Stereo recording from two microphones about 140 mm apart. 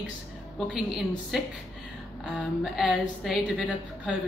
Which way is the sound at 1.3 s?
Centre (ahead or behind).